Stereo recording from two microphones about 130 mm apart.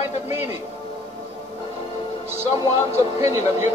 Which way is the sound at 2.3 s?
25° right (ahead or behind).